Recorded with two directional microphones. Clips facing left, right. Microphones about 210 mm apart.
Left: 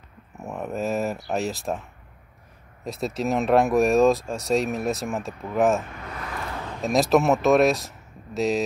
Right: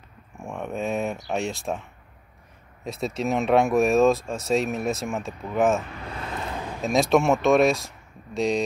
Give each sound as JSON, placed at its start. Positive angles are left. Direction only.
{"t": 0.4, "sound": "a sound", "side_deg": 5}
{"t": 2.8, "sound": "speech", "side_deg": 0}
{"t": 6.0, "sound": "vehicle", "side_deg": -25}
{"t": 6.8, "sound": "speech", "side_deg": 0}